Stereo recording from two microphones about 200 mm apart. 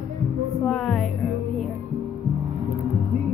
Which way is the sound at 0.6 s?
Centre (ahead or behind).